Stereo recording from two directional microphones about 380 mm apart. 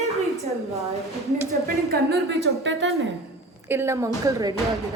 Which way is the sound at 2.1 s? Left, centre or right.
Right.